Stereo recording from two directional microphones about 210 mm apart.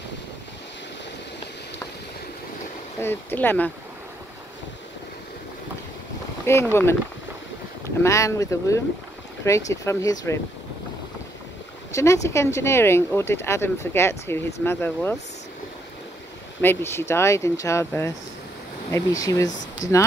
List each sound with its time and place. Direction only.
3.0 s speech: 10° left (ahead or behind)
6.4 s speech: 10° left (ahead or behind)
8.0 s speech: 15° left (ahead or behind)
11.9 s speech: 15° left (ahead or behind)
16.6 s speech: 10° left (ahead or behind)